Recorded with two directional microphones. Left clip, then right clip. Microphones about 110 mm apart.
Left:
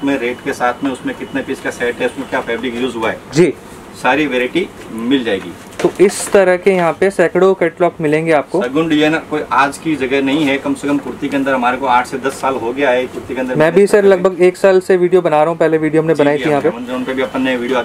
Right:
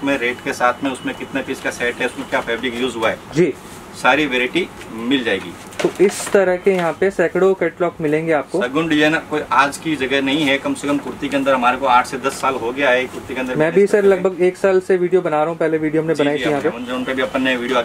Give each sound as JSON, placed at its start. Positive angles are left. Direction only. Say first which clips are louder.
{"t": 0.0, "sound": "speech", "louder": "left 2 dB", "side_deg": -5}
{"t": 6.0, "sound": "speech", "louder": "left 4 dB", "side_deg": 15}
{"t": 8.5, "sound": "speech", "louder": "left 3 dB", "side_deg": 0}
{"t": 13.6, "sound": "speech", "louder": "left 4 dB", "side_deg": 20}
{"t": 16.3, "sound": "speech", "louder": "left 4 dB", "side_deg": 0}